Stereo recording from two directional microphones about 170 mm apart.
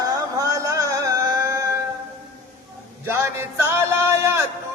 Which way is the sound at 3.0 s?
15° right (ahead or behind).